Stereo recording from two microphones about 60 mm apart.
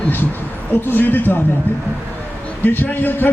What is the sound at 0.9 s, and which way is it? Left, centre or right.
Speech, left.